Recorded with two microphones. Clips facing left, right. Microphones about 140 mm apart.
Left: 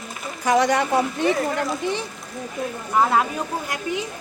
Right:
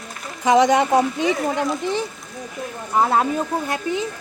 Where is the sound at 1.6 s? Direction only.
Centre (ahead or behind).